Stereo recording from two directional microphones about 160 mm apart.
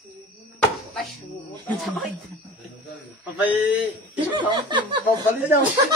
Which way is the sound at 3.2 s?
10° right (ahead or behind).